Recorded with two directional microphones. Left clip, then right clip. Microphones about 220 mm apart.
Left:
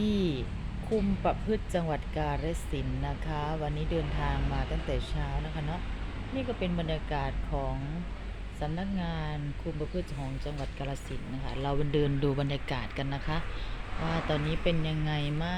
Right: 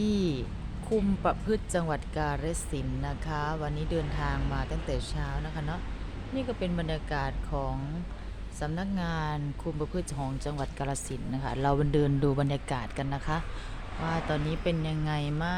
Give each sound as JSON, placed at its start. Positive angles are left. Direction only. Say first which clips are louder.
{"t": 0.0, "sound": "a sound", "louder": "right 1 dB", "side_deg": -5}
{"t": 1.2, "sound": "speech", "louder": "right 1 dB", "side_deg": -10}
{"t": 6.3, "sound": "speech", "louder": "right 1 dB", "side_deg": -5}
{"t": 10.4, "sound": "speech", "louder": "right 3 dB", "side_deg": -20}